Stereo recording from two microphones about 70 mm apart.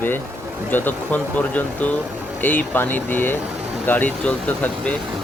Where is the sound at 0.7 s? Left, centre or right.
Left.